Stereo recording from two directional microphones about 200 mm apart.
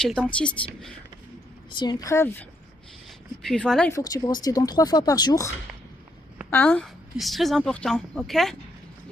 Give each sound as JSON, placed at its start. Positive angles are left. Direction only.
{"t": 0.0, "sound": "speech", "side_deg": 5}
{"t": 1.7, "sound": "speech", "side_deg": 20}
{"t": 3.9, "sound": "speech", "side_deg": 20}
{"t": 6.5, "sound": "speech", "side_deg": 10}